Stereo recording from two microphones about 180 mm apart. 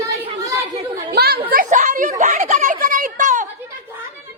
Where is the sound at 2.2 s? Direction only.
45° right (ahead or behind).